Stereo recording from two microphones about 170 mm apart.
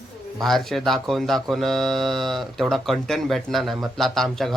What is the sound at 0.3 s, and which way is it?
Speech, centre (ahead or behind).